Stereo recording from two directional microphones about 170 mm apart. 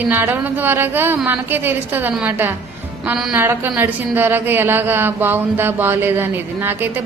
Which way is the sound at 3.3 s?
15° right (ahead or behind).